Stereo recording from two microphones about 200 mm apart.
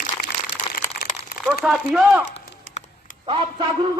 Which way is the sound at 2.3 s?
35° left (ahead or behind).